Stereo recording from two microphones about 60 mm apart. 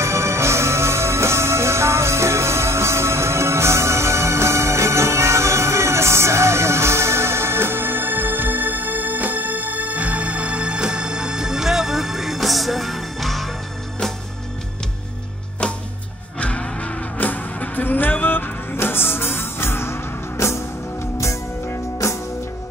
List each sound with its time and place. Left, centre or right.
0.0 s music: right; by 13.5 s centre
15.6 s music: centre; by 22.2 s left